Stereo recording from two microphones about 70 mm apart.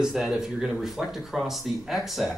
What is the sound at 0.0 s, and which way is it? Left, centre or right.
Speech, centre.